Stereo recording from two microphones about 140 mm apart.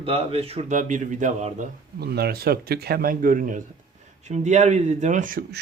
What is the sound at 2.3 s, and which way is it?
Speech, 90° right.